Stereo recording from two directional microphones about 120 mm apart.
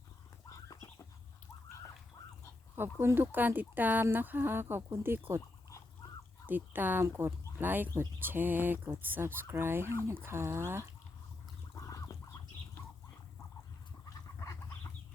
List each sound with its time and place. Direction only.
0.5 s chicken: 25° left (ahead or behind)
3.0 s speech: 20° right (ahead or behind)
6.5 s speech: 15° right (ahead or behind)
11.8 s fowl: 25° left (ahead or behind)